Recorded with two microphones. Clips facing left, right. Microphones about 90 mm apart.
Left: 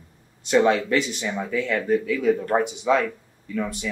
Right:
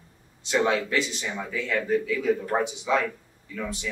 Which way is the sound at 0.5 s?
55° left (ahead or behind).